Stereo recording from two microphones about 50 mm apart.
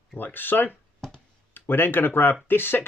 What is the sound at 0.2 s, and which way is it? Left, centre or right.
Speech, left.